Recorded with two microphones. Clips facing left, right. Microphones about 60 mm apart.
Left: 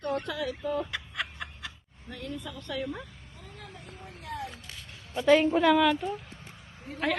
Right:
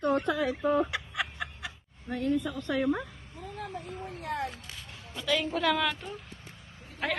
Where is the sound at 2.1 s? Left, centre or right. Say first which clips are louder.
Right 9 dB; right.